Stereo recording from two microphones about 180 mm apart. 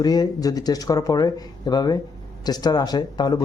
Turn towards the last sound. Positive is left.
turn(degrees=25)  # may be behind; listen again after turning